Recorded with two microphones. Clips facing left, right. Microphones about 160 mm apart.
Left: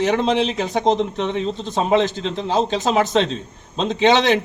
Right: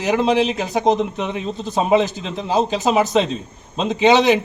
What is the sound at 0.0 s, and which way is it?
Speech, 5° right (ahead or behind).